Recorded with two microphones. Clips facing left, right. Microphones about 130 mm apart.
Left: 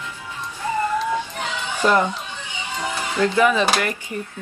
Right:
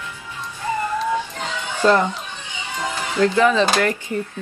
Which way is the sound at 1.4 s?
15° left (ahead or behind).